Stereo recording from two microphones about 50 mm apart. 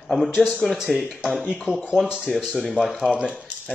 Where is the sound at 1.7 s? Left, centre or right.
Left.